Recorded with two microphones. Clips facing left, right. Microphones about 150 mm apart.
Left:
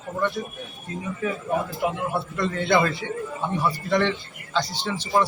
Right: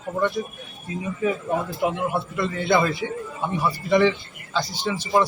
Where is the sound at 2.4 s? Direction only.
5° right (ahead or behind).